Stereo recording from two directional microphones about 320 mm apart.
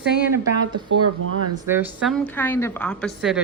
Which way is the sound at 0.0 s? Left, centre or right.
Left.